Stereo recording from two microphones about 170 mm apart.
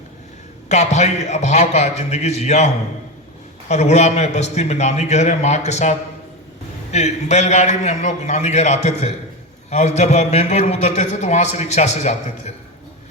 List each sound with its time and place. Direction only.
0.7 s a man's voice: 40° left (ahead or behind)
3.7 s a man's voice: 40° left (ahead or behind)